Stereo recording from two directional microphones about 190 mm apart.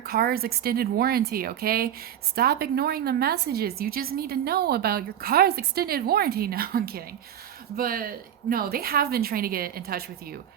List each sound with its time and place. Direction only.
0.0 s a woman's voice: 50° right (ahead or behind)